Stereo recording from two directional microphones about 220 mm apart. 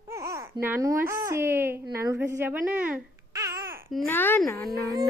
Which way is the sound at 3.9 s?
5° left (ahead or behind).